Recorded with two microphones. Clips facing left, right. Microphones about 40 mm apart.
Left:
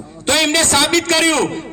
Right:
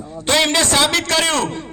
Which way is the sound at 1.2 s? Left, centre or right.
Centre.